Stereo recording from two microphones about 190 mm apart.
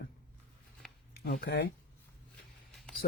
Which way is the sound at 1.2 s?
55° left (ahead or behind).